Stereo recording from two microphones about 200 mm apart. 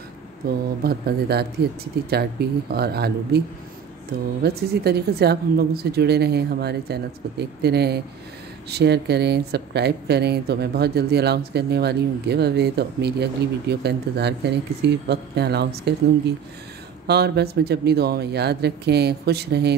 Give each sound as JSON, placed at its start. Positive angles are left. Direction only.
{"t": 0.4, "sound": "speech", "side_deg": -50}
{"t": 17.1, "sound": "speech", "side_deg": -55}